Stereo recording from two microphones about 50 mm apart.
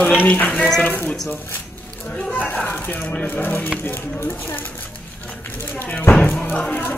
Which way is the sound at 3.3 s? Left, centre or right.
Left.